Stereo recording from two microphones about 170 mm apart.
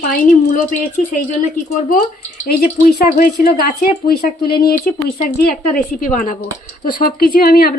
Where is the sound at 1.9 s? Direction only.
55° left (ahead or behind).